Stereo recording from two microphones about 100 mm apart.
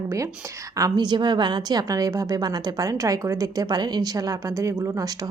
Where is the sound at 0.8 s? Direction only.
40° right (ahead or behind).